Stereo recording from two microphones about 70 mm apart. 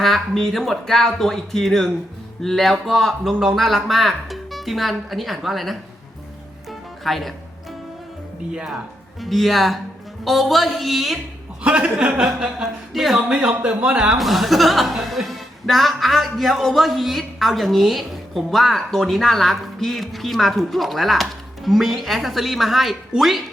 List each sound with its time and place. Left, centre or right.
0.0 s a woman's voice: centre
6.7 s music: centre
8.5 s speech: centre
9.2 s a woman's voice: centre
11.6 s speech: centre
12.9 s speech: centre
13.1 s speech: centre
13.5 s speech: right
14.2 s a woman's voice: centre